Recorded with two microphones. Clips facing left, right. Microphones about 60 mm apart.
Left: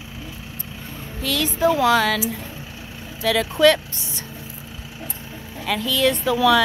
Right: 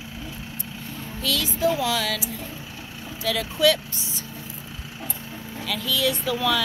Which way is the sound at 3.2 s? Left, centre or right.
Left.